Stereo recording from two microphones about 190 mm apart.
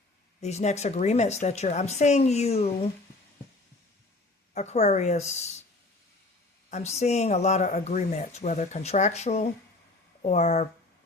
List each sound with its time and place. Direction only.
0.4 s speech: 35° left (ahead or behind)
4.5 s speech: 35° left (ahead or behind)
6.7 s speech: 35° left (ahead or behind)